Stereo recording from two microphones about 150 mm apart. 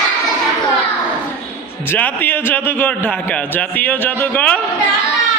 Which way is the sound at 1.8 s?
10° left (ahead or behind).